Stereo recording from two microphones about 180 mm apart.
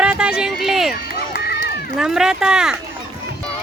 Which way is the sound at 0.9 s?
60° left (ahead or behind).